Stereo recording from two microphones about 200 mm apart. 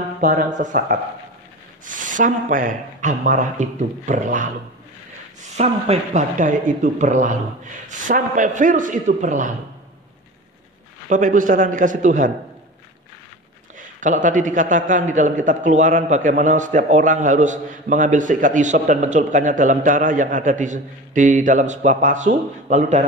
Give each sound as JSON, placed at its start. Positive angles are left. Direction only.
{"t": 0.2, "sound": "a man's voice", "side_deg": -45}
{"t": 5.6, "sound": "a man's voice", "side_deg": -35}
{"t": 11.1, "sound": "a man's voice", "side_deg": -40}
{"t": 13.7, "sound": "a man's voice", "side_deg": -40}